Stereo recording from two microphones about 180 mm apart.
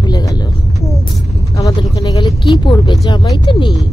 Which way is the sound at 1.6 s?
20° left (ahead or behind).